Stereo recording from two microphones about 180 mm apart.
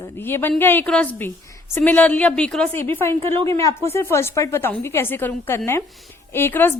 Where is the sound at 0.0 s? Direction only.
15° left (ahead or behind).